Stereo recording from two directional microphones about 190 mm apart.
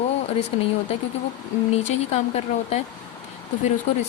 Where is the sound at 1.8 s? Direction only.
35° left (ahead or behind).